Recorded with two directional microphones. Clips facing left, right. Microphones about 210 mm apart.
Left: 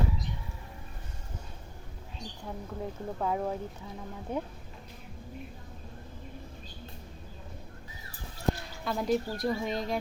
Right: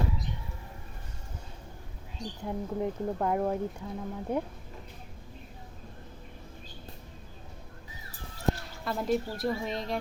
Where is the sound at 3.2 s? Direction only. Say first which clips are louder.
Right 2 dB; 5° right (ahead or behind).